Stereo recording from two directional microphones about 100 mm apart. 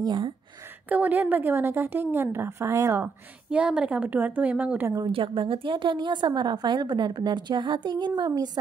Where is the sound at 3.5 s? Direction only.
10° right (ahead or behind).